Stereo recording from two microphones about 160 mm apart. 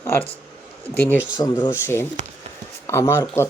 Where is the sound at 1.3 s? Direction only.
25° left (ahead or behind).